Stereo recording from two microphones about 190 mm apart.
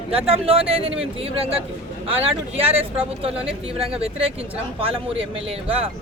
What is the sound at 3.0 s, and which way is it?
Speech, 30° right (ahead or behind).